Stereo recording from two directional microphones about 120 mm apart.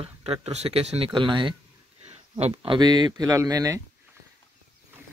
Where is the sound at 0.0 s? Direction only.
55° right (ahead or behind).